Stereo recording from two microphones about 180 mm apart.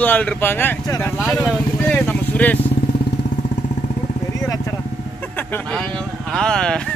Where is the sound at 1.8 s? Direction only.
10° left (ahead or behind).